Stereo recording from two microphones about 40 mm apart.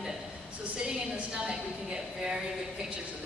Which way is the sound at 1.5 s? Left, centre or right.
Centre.